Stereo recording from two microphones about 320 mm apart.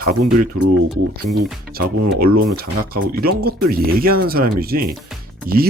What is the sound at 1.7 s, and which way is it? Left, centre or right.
Speech, right.